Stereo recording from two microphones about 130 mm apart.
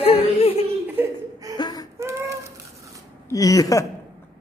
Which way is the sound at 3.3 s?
25° left (ahead or behind).